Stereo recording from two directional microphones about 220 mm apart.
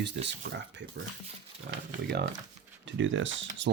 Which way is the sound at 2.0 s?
50° right (ahead or behind).